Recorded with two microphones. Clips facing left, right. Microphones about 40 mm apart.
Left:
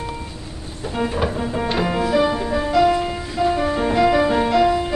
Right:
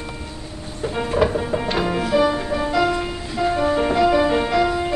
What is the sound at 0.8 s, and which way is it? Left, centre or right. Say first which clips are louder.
Speech: right 2 dB; centre.